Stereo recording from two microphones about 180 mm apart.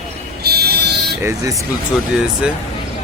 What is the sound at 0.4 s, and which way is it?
Buzzer, 60° right (ahead or behind).